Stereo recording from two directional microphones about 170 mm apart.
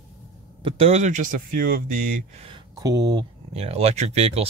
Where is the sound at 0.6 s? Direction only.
35° right (ahead or behind); by 1.9 s 55° right (ahead or behind).